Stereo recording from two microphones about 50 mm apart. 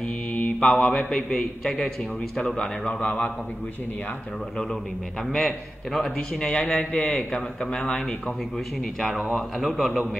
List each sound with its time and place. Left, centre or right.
0.3 s a man's voice: left
6.1 s speech: centre
9.1 s speech: centre